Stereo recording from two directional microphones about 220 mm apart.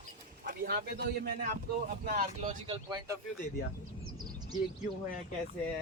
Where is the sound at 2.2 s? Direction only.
30° right (ahead or behind).